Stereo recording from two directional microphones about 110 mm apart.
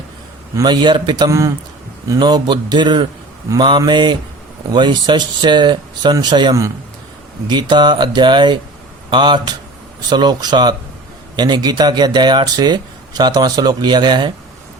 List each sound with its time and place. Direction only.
0.5 s speech: 40° right (ahead or behind)
1.3 s a man's voice: 30° right (ahead or behind)
2.0 s speech: 40° right (ahead or behind)